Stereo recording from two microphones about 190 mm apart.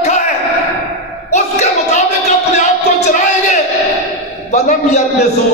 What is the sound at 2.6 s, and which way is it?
Music, 35° left (ahead or behind).